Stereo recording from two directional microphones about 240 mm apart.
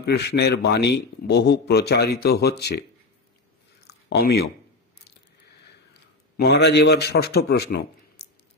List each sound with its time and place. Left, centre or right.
0.0 s a man's voice: left
3.8 s a sound: left
6.3 s a man's voice: left